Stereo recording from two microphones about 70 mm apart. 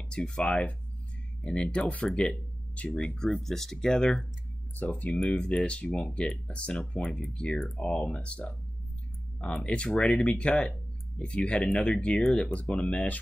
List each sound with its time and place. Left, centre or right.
0.1 s speech: centre
3.3 s speech: centre
4.7 s speech: left